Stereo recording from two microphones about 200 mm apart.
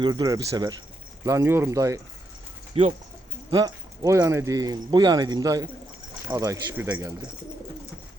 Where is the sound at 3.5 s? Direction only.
20° right (ahead or behind).